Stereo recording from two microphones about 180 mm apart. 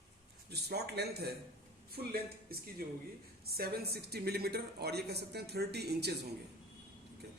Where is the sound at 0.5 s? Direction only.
65° right (ahead or behind).